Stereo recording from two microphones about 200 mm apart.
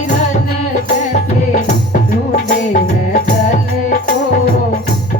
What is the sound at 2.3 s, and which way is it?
Music, 40° left (ahead or behind).